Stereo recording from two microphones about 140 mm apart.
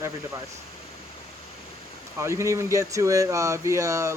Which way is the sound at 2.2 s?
20° right (ahead or behind).